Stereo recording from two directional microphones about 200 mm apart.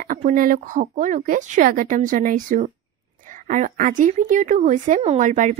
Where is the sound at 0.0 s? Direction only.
45° right (ahead or behind).